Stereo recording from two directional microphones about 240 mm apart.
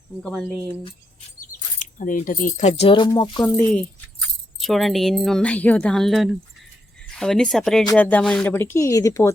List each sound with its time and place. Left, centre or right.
0.2 s speech: centre
1.8 s speech: left; by 9.3 s centre